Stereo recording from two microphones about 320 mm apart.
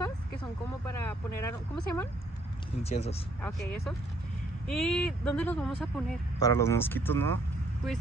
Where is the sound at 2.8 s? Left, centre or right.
Centre.